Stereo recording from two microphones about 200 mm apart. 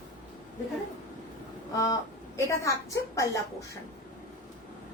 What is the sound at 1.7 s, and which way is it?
A woman's voice, 15° left (ahead or behind).